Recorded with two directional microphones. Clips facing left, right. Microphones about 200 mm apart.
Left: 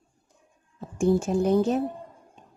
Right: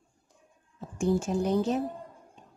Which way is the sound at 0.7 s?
50° left (ahead or behind).